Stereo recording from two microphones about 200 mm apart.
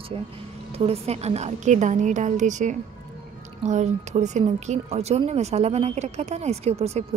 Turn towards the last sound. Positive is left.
turn(degrees=-30)  # may be behind; listen again after turning